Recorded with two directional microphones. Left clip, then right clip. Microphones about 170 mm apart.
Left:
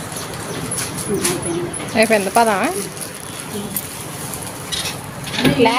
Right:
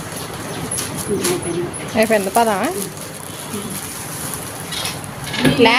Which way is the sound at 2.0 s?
Centre (ahead or behind).